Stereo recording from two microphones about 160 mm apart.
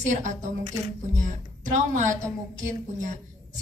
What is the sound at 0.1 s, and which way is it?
Speech, 50° right (ahead or behind).